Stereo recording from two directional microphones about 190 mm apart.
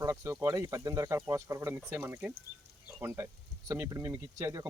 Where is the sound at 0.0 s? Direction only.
15° right (ahead or behind).